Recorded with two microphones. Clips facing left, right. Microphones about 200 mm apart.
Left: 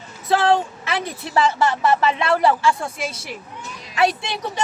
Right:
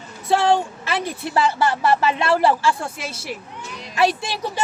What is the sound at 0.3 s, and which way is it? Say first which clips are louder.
Speech: even; centre (ahead or behind).